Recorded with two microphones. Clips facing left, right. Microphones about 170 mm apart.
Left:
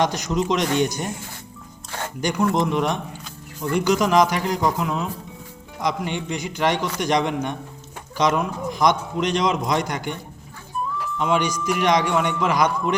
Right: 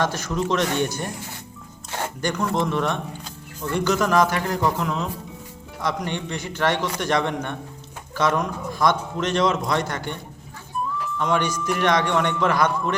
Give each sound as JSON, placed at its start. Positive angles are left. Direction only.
{"t": 0.0, "sound": "a man's voice", "side_deg": 15}
{"t": 2.2, "sound": "a man's voice", "side_deg": 10}
{"t": 11.2, "sound": "a man's voice", "side_deg": 10}